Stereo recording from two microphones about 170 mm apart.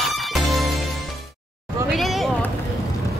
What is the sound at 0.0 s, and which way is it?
Music, centre (ahead or behind).